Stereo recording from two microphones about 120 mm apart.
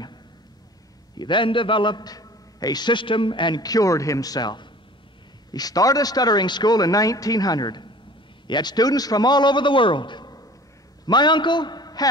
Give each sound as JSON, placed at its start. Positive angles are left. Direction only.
{"t": 1.1, "sound": "a man's voice", "side_deg": 40}